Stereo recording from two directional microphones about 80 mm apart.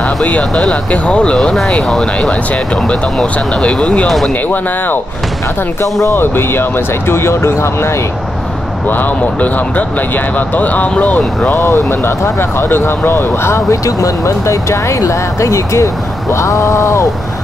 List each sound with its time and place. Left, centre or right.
0.0 s speech: centre
5.8 s speech: left
8.8 s speech: left